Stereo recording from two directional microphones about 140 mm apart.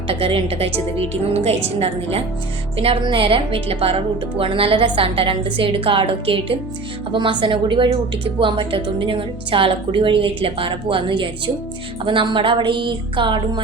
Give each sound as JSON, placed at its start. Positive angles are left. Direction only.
{"t": 0.1, "sound": "a woman's voice", "side_deg": -40}